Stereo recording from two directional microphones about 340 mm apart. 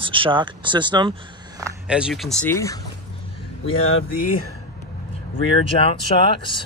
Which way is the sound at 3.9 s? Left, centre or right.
Left.